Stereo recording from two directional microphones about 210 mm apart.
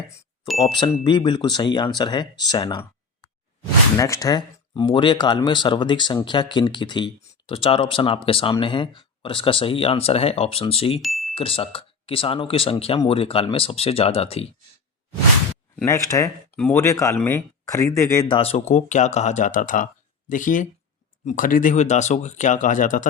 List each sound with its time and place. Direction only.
0.6 s speech: 20° left (ahead or behind)
3.9 s speech: 15° left (ahead or behind)
11.0 s a sound: centre (ahead or behind)
11.3 s speech: 25° left (ahead or behind)
15.7 s speech: 10° left (ahead or behind); by 23.0 s 35° left (ahead or behind)